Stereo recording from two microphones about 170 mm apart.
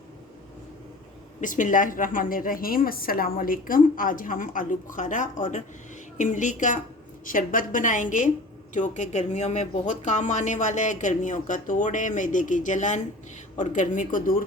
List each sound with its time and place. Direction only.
1.4 s speech: 50° left (ahead or behind)